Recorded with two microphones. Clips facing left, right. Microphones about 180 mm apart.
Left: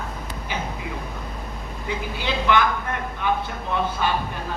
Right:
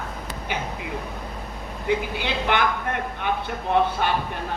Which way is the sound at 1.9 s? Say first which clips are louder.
Right 3 dB; 55° right (ahead or behind).